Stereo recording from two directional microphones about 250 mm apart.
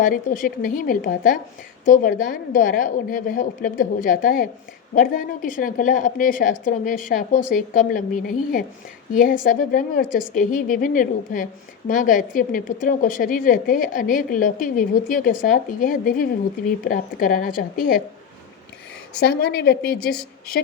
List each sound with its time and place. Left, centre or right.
0.0 s a woman's voice: left
19.1 s a woman's voice: left